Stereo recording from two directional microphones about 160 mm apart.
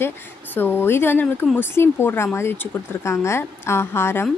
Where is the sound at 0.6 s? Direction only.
15° left (ahead or behind).